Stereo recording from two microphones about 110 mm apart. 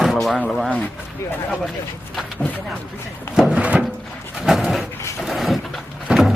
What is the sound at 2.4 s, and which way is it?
Speech, 15° left (ahead or behind).